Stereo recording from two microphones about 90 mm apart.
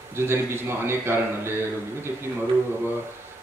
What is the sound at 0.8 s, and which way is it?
Speech, 25° right (ahead or behind).